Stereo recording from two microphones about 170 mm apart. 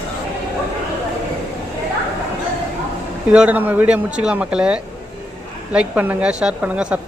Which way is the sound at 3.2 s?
5° right (ahead or behind).